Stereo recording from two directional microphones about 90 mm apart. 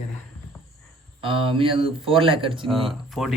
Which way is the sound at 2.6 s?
Centre (ahead or behind).